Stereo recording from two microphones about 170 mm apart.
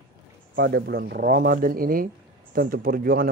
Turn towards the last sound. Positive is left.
turn(degrees=-60)  # may be behind; listen again after turning